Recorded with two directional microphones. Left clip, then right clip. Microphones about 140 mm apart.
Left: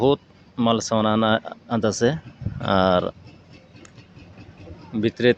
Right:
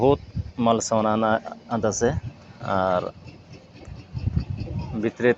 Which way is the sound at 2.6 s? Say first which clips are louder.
Left 4 dB; 85° left.